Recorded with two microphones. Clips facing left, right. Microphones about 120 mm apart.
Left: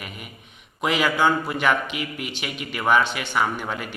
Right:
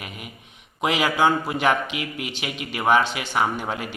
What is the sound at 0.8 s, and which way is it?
Speech, 20° right (ahead or behind).